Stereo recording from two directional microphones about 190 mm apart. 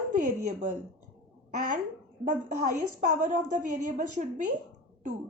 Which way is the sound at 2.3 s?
40° right (ahead or behind).